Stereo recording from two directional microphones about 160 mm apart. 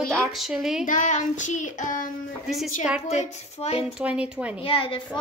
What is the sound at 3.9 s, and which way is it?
Speech, 5° right (ahead or behind).